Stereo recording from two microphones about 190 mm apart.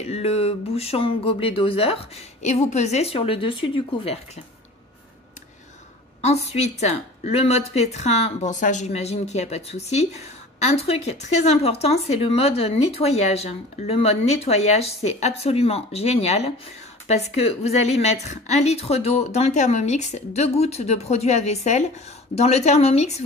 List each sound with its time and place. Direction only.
0.0 s a woman's voice: 30° left (ahead or behind)
6.2 s a woman's voice: 35° left (ahead or behind)